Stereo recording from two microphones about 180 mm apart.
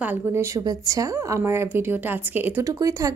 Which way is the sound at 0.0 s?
10° right (ahead or behind).